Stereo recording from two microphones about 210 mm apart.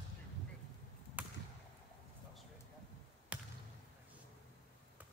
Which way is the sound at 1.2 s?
5° right (ahead or behind).